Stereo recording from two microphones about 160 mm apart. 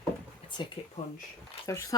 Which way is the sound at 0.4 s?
30° left (ahead or behind).